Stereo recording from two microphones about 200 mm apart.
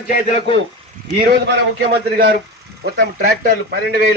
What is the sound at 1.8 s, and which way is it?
A man's voice, 50° right (ahead or behind).